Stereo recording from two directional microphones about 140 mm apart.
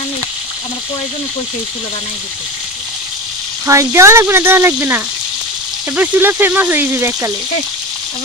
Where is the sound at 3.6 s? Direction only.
20° right (ahead or behind).